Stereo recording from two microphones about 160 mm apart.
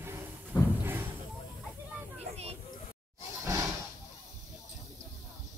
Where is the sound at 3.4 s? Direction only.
20° right (ahead or behind).